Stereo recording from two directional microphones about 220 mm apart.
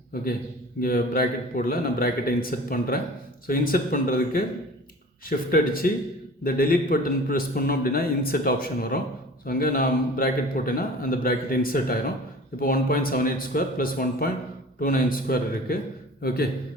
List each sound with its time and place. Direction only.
0.8 s a man's voice: 40° left (ahead or behind)